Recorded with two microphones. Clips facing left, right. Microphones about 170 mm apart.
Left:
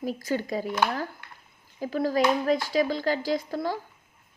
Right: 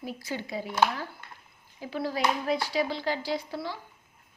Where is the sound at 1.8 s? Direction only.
45° left (ahead or behind).